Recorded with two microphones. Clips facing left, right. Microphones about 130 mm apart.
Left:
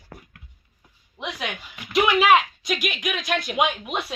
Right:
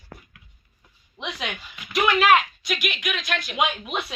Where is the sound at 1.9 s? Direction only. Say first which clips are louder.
Left 1 dB; 15° left (ahead or behind).